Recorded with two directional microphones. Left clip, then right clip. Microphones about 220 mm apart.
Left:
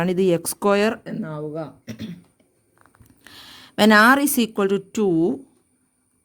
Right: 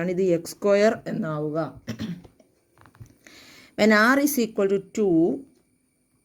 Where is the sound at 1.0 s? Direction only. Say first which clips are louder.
Right 2 dB; 15° left (ahead or behind).